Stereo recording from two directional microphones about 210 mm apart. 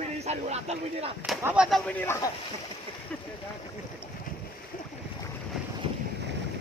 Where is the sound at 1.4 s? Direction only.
5° right (ahead or behind).